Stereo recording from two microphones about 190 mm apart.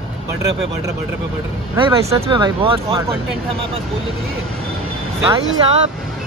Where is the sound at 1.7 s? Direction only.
25° right (ahead or behind).